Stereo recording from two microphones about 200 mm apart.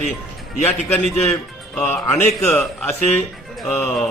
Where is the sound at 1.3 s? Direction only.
5° left (ahead or behind).